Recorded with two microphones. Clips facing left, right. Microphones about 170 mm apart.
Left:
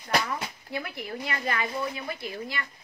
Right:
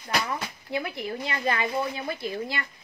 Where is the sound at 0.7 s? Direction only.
25° right (ahead or behind).